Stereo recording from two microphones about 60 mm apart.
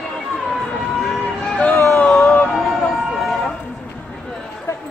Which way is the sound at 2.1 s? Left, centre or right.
Centre.